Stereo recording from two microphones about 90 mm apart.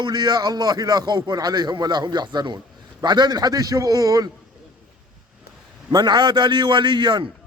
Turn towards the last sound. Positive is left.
turn(degrees=-60)  # may be behind; listen again after turning